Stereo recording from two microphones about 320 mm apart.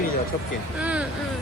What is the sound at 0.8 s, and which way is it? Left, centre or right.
Speech, centre.